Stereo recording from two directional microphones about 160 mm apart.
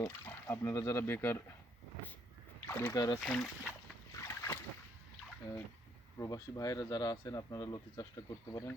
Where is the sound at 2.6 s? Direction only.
15° left (ahead or behind).